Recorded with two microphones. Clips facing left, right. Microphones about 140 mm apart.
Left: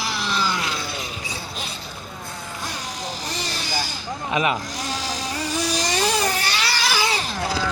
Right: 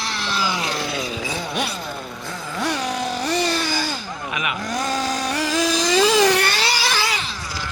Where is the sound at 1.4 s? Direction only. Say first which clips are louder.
Right 8 dB; 70° right (ahead or behind); by 3.8 s 55° right (ahead or behind).